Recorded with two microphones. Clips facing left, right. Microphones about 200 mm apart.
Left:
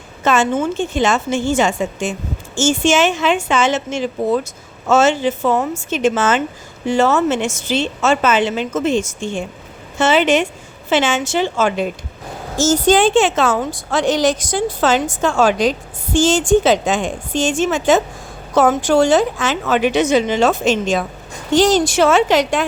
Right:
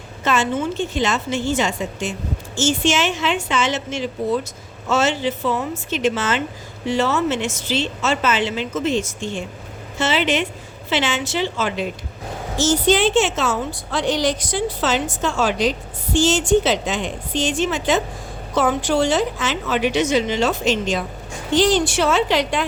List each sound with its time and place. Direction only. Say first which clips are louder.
0.3 s a woman's voice: left 4 dB; 45° left (ahead or behind)